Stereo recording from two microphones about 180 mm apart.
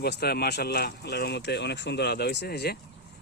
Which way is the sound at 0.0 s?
60° left (ahead or behind).